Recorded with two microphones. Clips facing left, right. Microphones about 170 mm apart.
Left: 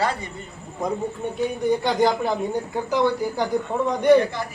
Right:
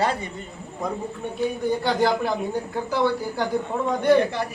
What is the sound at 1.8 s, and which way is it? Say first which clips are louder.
A man's voice: right 1 dB; 15° left (ahead or behind).